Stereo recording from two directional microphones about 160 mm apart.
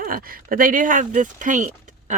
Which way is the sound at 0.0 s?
65° right (ahead or behind).